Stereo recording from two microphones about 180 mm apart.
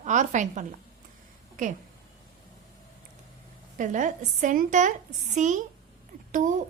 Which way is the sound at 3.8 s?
45° right (ahead or behind).